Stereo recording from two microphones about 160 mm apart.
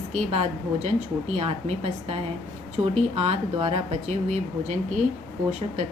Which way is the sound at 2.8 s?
40° right (ahead or behind).